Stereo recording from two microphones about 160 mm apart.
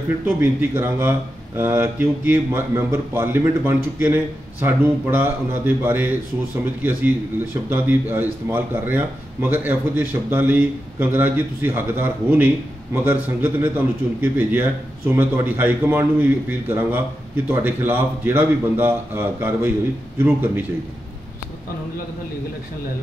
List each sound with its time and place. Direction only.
0.4 s a man's voice: 10° right (ahead or behind)